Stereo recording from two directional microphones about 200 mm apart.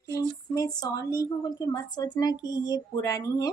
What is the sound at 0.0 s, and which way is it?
A woman's voice, 15° left (ahead or behind).